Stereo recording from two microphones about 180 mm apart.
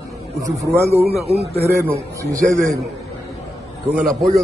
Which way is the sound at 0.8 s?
35° right (ahead or behind).